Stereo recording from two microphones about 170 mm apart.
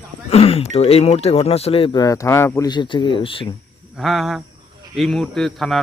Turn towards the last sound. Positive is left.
turn(degrees=0)  # may be behind; listen again after turning